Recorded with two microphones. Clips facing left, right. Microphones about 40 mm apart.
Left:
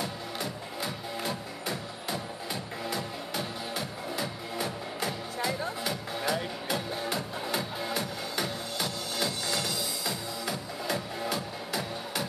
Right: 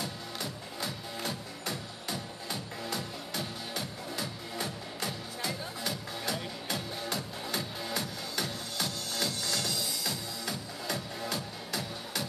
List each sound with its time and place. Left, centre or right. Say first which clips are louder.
0.0 s music: left 3 dB; centre